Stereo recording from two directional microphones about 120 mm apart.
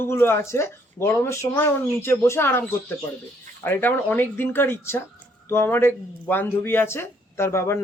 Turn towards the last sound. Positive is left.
turn(degrees=20)  # may be behind; listen again after turning